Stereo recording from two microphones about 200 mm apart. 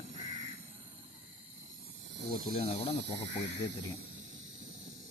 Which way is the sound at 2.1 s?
55° right (ahead or behind).